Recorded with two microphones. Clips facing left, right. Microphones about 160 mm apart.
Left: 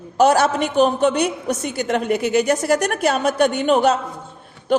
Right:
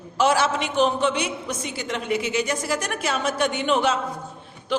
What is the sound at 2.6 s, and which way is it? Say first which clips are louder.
A woman's voice: left 8 dB; 60° left (ahead or behind).